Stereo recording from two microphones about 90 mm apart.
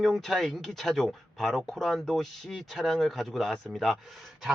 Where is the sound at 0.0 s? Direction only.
5° left (ahead or behind).